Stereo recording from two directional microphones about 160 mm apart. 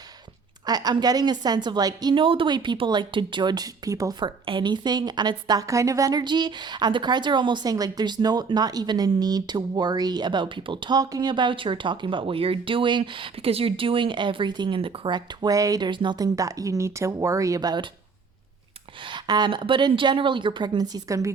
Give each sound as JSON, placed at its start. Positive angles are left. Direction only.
{"t": 0.6, "sound": "a woman's voice", "side_deg": -25}
{"t": 19.0, "sound": "a woman's voice", "side_deg": -30}